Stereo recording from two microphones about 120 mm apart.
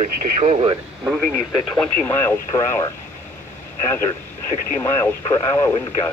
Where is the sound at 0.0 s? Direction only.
70° right (ahead or behind).